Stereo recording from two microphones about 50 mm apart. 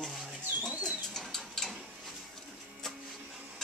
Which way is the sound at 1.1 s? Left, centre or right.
Centre.